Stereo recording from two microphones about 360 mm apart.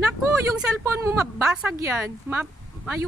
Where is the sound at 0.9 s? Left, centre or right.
Centre.